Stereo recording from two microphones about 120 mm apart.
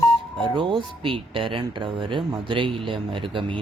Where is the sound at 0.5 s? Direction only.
45° right (ahead or behind).